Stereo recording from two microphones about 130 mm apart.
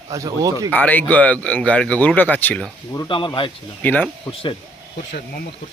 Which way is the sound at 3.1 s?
40° left (ahead or behind).